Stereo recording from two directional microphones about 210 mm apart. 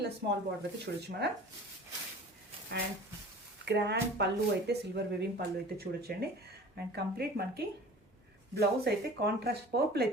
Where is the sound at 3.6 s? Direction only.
55° right (ahead or behind).